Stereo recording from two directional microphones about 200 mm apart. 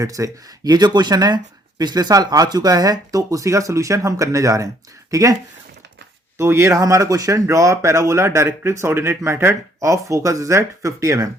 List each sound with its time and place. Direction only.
0.0 s speech: 15° right (ahead or behind)